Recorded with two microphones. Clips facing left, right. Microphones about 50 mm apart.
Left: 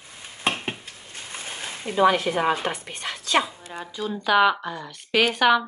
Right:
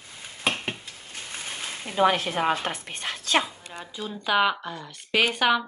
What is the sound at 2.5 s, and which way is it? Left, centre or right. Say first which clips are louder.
Speech: left 2 dB; left.